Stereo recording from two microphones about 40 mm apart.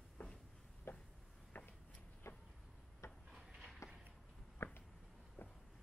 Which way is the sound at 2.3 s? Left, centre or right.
Left.